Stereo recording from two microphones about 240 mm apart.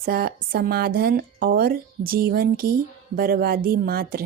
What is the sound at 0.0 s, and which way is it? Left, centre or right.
A woman's voice, right.